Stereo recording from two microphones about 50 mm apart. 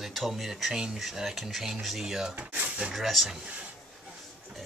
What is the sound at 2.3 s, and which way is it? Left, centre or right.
Drawer open or close, right.